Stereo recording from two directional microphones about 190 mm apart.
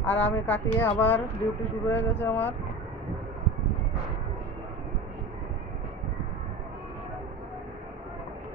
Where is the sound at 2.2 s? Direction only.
10° left (ahead or behind).